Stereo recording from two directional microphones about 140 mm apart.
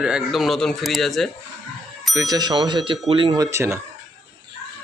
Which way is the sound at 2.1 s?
25° right (ahead or behind).